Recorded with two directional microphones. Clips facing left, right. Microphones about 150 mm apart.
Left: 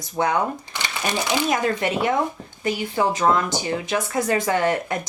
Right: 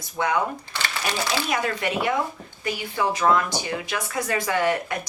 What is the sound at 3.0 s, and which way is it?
Speech, 25° left (ahead or behind).